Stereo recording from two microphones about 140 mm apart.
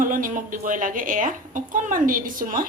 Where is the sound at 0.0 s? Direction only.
75° right (ahead or behind).